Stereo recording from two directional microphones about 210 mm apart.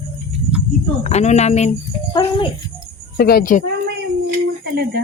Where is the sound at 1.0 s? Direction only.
30° left (ahead or behind).